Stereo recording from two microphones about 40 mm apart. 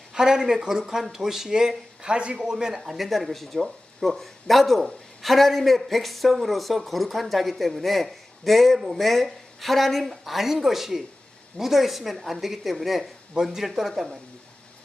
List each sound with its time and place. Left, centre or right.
0.1 s speech: centre
2.8 s speech: centre